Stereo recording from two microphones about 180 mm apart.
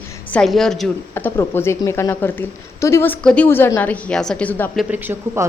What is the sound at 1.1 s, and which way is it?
A woman's voice, 15° left (ahead or behind).